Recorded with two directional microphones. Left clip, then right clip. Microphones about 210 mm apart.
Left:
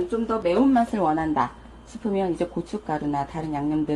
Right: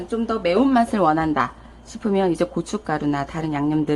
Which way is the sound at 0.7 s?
20° right (ahead or behind).